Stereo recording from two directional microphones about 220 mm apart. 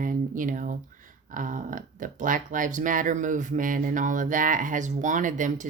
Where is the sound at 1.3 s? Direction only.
35° right (ahead or behind).